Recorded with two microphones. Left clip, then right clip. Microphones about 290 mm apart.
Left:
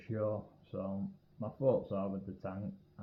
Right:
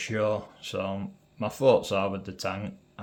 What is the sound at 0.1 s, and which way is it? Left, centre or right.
Speech, right.